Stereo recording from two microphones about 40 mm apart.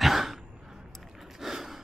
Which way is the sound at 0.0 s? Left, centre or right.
Centre.